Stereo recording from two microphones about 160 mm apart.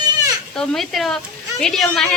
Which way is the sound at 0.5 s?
5° left (ahead or behind).